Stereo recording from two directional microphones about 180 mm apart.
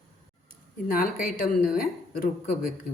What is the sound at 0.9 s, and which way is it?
A woman's voice, 50° left (ahead or behind).